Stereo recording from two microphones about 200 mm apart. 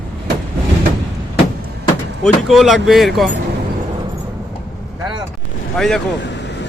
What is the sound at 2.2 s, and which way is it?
Speech, centre (ahead or behind).